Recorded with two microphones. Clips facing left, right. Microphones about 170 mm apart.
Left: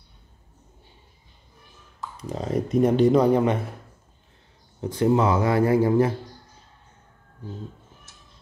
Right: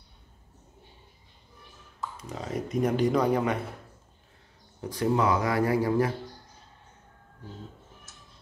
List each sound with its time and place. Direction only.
2.2 s speech: 35° left (ahead or behind)
4.8 s speech: 25° left (ahead or behind)